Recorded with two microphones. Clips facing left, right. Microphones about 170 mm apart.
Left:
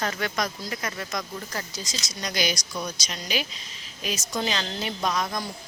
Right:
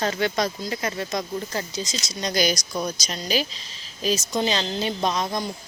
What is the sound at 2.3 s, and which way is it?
A woman's voice, 40° right (ahead or behind).